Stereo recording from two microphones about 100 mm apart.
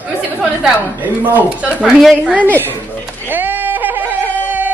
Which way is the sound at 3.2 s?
20° right (ahead or behind).